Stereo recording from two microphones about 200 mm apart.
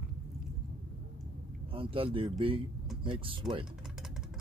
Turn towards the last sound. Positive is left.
turn(degrees=-25)  # may be behind; listen again after turning